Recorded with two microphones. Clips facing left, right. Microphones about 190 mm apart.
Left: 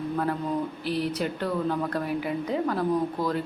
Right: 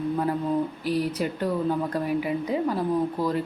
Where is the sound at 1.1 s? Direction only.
10° right (ahead or behind).